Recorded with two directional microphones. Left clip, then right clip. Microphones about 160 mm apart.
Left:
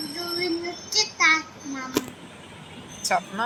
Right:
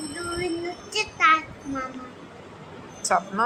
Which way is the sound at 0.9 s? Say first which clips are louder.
Left 1 dB; 15° right (ahead or behind).